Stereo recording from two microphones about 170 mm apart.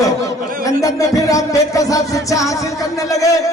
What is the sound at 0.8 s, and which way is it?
A man's voice, 20° left (ahead or behind).